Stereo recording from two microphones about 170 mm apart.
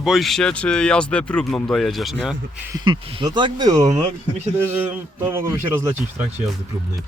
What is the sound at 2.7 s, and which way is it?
A man's voice, 25° right (ahead or behind).